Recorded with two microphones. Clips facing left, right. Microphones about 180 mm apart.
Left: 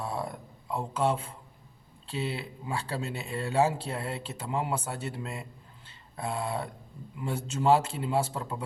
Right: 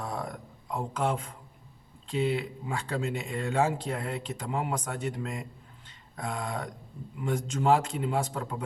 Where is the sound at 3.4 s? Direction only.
5° left (ahead or behind).